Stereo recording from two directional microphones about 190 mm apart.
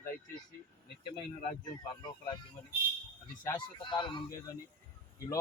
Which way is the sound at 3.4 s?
25° left (ahead or behind).